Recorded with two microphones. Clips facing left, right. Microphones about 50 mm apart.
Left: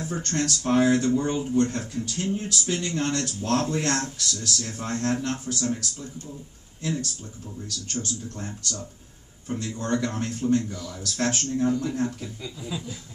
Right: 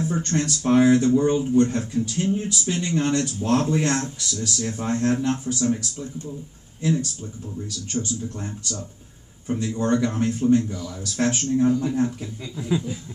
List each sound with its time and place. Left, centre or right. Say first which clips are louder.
0.1 s speech: right 5 dB; centre
0.4 s speech: right 3 dB; centre
12.5 s speech: right 11 dB; right